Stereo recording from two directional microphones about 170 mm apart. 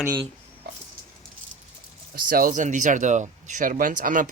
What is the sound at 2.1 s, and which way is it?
Speech, 60° right (ahead or behind).